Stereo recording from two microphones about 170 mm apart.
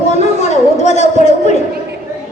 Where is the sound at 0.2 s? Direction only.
40° left (ahead or behind).